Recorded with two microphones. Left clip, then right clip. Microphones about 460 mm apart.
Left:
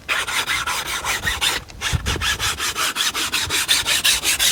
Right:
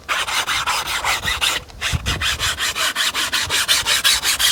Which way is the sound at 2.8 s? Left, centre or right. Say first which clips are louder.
Right 1 dB; centre.